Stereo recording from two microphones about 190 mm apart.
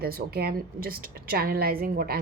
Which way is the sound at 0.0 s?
55° right (ahead or behind).